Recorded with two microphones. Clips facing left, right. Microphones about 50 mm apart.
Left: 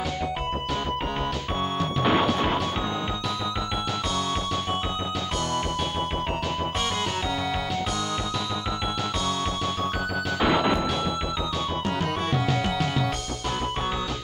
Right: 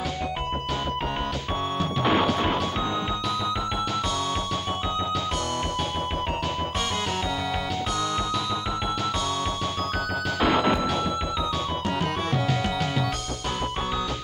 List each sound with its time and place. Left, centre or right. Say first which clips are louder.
2.0 s music: even; centre
10.4 s music: right 1 dB; centre